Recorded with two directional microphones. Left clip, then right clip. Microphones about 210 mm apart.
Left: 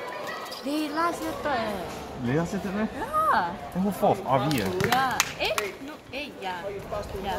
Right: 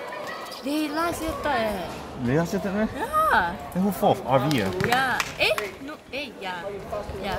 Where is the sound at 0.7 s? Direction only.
20° right (ahead or behind).